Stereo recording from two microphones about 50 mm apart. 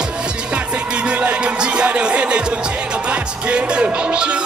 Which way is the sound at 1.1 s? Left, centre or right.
Right.